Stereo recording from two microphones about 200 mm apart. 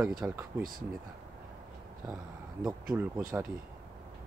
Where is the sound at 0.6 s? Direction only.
45° right (ahead or behind).